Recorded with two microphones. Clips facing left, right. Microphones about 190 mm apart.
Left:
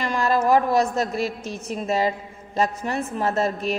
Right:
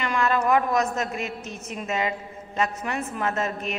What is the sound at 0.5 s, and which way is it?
A woman's voice, 35° left (ahead or behind).